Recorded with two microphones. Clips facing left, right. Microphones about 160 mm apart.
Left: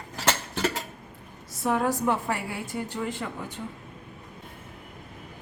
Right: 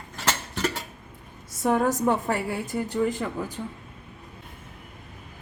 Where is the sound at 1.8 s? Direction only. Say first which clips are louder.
Right 2 dB; 40° right (ahead or behind).